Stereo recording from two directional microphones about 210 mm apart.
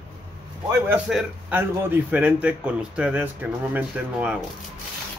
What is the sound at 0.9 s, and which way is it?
A man's voice, 5° right (ahead or behind).